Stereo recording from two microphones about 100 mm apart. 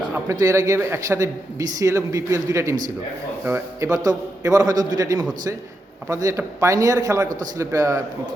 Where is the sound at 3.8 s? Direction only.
35° right (ahead or behind).